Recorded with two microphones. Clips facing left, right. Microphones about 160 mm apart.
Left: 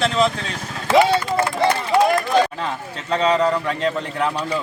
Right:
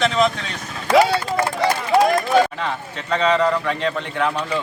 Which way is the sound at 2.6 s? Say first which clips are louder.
Right 1 dB; 35° left (ahead or behind).